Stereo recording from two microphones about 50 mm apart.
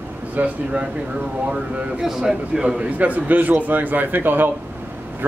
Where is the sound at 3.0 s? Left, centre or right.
Right.